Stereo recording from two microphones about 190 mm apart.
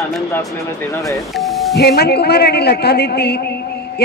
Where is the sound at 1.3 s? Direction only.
Centre (ahead or behind).